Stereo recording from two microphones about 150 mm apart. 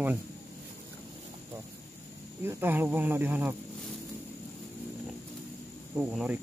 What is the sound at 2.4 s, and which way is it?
Speech, 15° right (ahead or behind).